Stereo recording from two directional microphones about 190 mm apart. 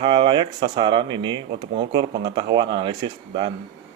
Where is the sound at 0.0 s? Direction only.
25° right (ahead or behind).